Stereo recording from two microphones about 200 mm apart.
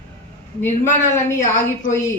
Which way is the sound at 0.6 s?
10° left (ahead or behind).